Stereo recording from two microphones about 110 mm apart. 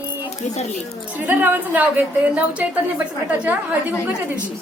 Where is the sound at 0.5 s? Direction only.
80° left.